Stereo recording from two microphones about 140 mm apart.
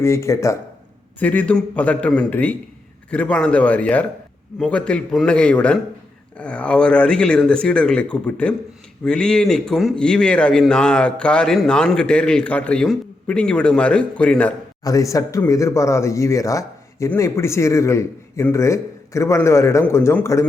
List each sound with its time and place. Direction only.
0.0 s a man's voice: 20° left (ahead or behind)
14.8 s a man's voice: 25° left (ahead or behind)